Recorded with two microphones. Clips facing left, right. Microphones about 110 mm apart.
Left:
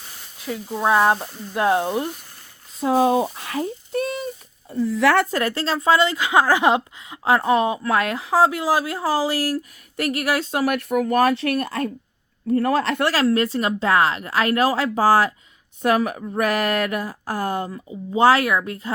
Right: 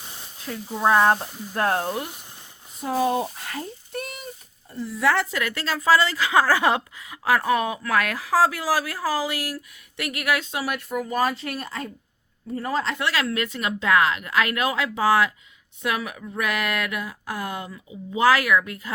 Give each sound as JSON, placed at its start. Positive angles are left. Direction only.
{"t": 0.9, "sound": "speech", "side_deg": 10}
{"t": 2.8, "sound": "speech", "side_deg": 90}
{"t": 4.9, "sound": "speech", "side_deg": 65}
{"t": 5.4, "sound": "speech", "side_deg": 30}
{"t": 13.1, "sound": "speech", "side_deg": 35}